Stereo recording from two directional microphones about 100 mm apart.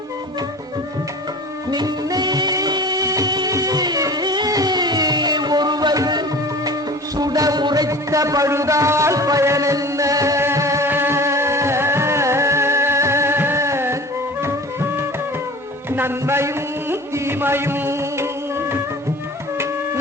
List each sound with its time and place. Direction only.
1.7 s music: 45° right (ahead or behind); by 18.8 s 25° right (ahead or behind)